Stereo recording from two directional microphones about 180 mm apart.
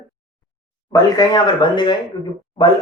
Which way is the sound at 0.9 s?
20° left (ahead or behind).